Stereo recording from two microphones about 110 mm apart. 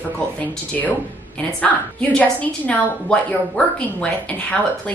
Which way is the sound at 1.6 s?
15° left (ahead or behind).